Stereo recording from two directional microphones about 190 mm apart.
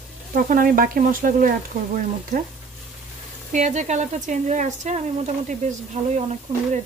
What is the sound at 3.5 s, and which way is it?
Speech, 40° right (ahead or behind).